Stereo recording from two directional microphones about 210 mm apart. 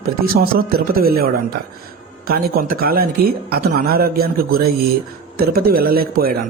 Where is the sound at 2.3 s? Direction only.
45° right (ahead or behind).